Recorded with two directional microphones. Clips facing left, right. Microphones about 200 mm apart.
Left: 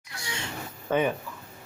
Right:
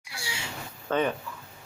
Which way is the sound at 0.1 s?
10° right (ahead or behind).